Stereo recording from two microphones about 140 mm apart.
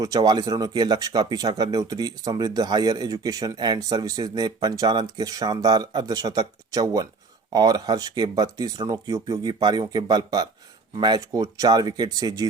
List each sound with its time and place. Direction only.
0.0 s speech: 25° right (ahead or behind)